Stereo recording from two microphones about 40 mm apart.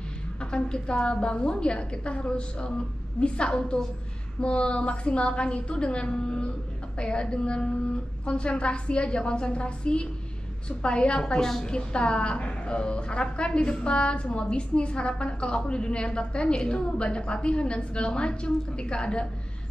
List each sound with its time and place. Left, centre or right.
0.4 s a woman's voice: left